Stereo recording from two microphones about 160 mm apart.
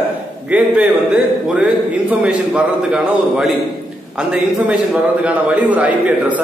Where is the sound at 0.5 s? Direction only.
10° right (ahead or behind).